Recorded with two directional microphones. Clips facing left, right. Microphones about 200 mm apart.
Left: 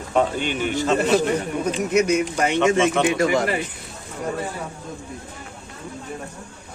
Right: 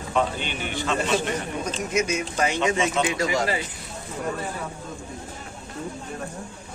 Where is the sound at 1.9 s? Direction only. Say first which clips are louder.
Left 7 dB; 60° left (ahead or behind).